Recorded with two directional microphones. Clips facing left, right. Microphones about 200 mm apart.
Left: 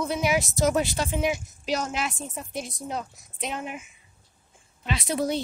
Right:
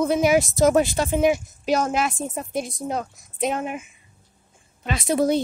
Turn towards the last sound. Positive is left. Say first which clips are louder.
# right 6 dB
turn(degrees=-50)  # may be behind; listen again after turning